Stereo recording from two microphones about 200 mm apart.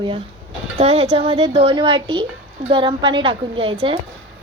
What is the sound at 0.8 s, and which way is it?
A woman's voice, 30° right (ahead or behind).